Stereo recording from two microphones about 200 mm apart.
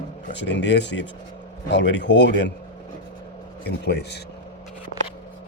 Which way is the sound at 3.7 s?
55° left (ahead or behind).